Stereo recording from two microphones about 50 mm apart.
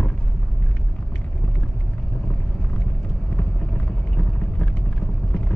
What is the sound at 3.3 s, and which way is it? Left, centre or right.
Vehicle, left.